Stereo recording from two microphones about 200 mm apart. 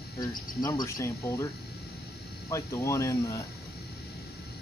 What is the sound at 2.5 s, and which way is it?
Speech, 15° left (ahead or behind).